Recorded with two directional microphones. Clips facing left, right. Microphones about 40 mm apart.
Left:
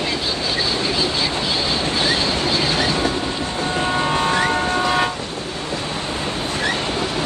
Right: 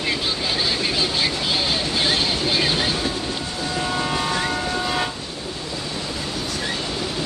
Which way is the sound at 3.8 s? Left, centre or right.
Left.